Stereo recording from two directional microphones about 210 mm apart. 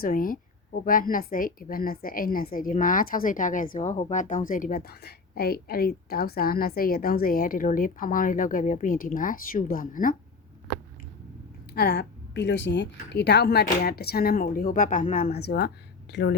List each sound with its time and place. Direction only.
0.0 s speech: 40° left (ahead or behind)
11.7 s a woman's voice: 50° left (ahead or behind)